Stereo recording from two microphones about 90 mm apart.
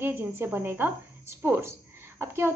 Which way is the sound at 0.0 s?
25° right (ahead or behind).